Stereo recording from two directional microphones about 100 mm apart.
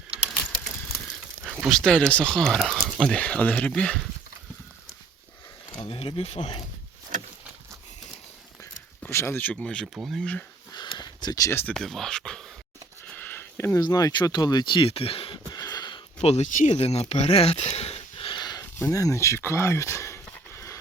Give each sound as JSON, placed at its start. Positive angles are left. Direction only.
{"t": 1.6, "sound": "speech", "side_deg": 5}
{"t": 5.9, "sound": "speech", "side_deg": 65}
{"t": 9.0, "sound": "speech", "side_deg": 25}
{"t": 10.2, "sound": "speech", "side_deg": 10}
{"t": 10.7, "sound": "a sound", "side_deg": 45}
{"t": 11.7, "sound": "speech", "side_deg": 5}
{"t": 13.1, "sound": "a sound", "side_deg": 20}
{"t": 13.7, "sound": "speech", "side_deg": 40}
{"t": 15.5, "sound": "a sound", "side_deg": 40}
{"t": 16.2, "sound": "speech", "side_deg": 90}
{"t": 18.8, "sound": "speech", "side_deg": 30}
{"t": 20.5, "sound": "a sound", "side_deg": 30}